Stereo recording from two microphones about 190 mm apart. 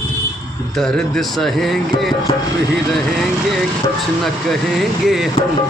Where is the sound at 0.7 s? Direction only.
5° left (ahead or behind).